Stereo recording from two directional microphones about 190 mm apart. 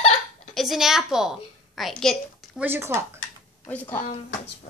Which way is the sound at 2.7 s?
15° right (ahead or behind).